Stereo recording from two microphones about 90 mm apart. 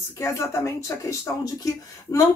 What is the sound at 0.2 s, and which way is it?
Speech, 30° left (ahead or behind).